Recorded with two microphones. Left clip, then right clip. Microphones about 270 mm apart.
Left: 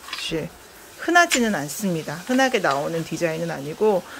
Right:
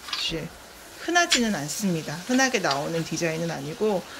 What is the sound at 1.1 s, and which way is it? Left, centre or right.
Speech, centre.